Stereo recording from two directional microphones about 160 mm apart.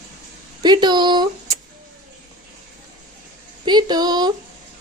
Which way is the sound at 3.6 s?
25° right (ahead or behind).